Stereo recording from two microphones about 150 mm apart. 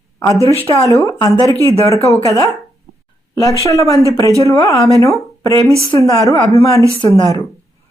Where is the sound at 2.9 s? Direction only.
80° right.